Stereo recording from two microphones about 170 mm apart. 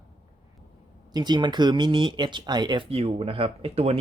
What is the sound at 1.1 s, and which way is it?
Speech, 25° right (ahead or behind).